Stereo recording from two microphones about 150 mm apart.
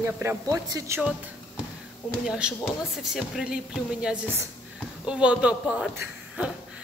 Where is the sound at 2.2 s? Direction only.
5° right (ahead or behind).